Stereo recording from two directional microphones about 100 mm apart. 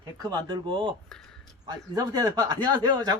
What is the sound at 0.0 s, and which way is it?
Speech, 40° right (ahead or behind).